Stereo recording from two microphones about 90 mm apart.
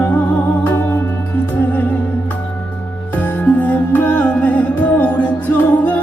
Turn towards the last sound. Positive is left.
turn(degrees=20)  # may be behind; listen again after turning